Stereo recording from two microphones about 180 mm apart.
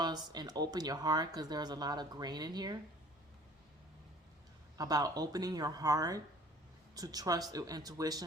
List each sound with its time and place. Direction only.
0.0 s speech: 25° right (ahead or behind)
4.8 s speech: 20° right (ahead or behind)